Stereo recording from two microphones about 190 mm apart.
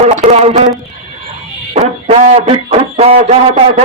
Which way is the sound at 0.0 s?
35° right (ahead or behind).